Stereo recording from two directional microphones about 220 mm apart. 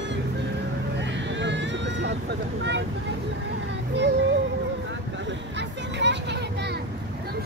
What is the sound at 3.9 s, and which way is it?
Child singing, 50° right (ahead or behind).